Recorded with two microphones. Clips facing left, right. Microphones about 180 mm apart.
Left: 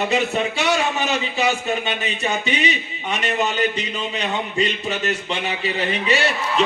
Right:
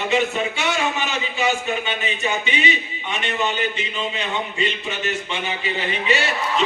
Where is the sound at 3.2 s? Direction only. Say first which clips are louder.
Left 2 dB; 40° left (ahead or behind).